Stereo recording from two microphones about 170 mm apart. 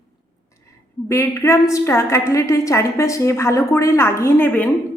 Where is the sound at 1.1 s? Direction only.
15° left (ahead or behind).